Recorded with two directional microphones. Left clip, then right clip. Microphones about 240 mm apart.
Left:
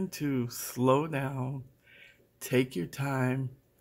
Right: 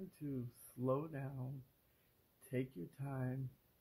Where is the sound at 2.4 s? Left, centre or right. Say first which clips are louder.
Left 16 dB; left.